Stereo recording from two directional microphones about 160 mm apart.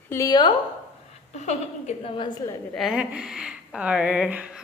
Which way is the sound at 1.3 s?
45° left (ahead or behind).